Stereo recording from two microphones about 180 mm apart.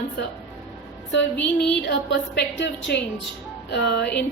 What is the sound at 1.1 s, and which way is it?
Speech, 85° left.